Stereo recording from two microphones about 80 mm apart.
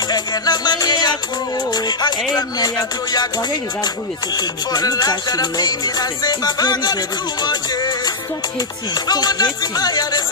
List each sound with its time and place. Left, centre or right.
0.1 s music: left
4.7 s music: left
9.1 s music: left